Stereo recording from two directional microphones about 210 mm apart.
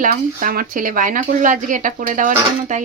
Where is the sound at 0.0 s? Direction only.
40° right (ahead or behind).